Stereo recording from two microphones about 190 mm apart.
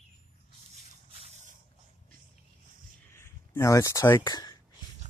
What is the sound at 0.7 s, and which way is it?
Drip, 35° right (ahead or behind).